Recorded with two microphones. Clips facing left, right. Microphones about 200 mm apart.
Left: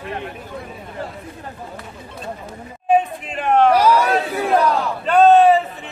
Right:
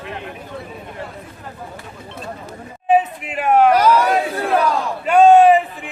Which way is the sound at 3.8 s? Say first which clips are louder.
Right 1 dB; 10° left (ahead or behind).